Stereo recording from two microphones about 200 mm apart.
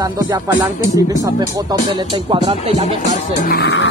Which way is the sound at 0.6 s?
15° right (ahead or behind).